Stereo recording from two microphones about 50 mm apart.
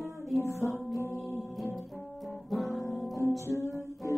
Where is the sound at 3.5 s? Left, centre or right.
Left.